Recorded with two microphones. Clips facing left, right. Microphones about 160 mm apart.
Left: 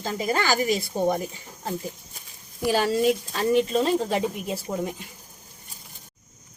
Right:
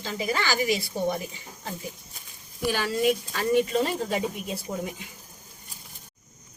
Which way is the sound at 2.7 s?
30° left (ahead or behind).